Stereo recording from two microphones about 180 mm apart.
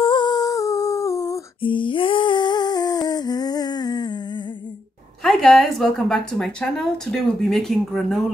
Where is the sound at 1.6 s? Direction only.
30° left (ahead or behind).